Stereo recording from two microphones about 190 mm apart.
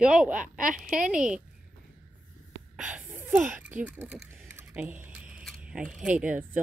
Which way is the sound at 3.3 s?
5° right (ahead or behind).